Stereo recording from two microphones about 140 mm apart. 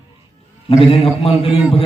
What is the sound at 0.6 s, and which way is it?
A man's voice, 40° left (ahead or behind).